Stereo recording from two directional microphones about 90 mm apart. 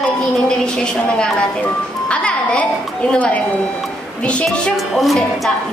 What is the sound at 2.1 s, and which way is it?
Music, 15° left (ahead or behind).